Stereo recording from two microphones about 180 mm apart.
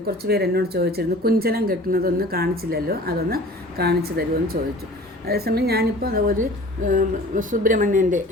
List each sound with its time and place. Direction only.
0.3 s a woman's voice: 60° right (ahead or behind); by 8.2 s 45° right (ahead or behind)